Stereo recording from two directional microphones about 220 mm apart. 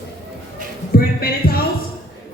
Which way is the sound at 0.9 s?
45° left (ahead or behind).